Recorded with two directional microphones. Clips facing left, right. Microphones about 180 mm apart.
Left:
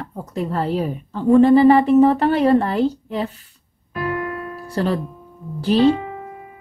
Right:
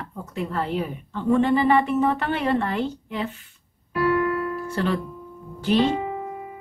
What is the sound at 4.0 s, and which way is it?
Music, 25° left (ahead or behind).